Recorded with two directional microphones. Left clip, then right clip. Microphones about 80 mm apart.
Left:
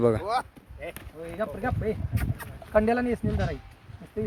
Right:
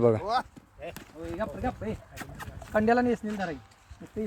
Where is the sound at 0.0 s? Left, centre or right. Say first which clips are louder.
Even; left.